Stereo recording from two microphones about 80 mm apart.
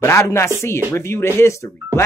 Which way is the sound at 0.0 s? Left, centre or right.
Left.